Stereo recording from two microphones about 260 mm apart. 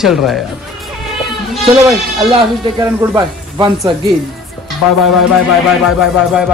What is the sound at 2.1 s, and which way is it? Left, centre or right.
Speech, centre.